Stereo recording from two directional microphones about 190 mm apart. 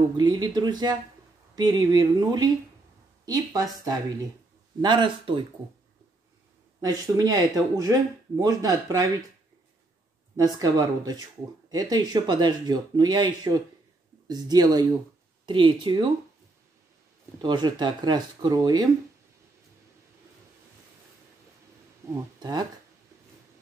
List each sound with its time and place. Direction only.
0.2 s speech: 25° right (ahead or behind)
6.8 s speech: 20° right (ahead or behind)
10.3 s speech: 20° right (ahead or behind)
17.4 s speech: 20° right (ahead or behind)
22.0 s speech: 15° right (ahead or behind)